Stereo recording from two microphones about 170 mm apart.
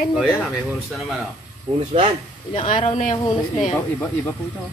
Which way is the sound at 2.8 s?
45° left (ahead or behind).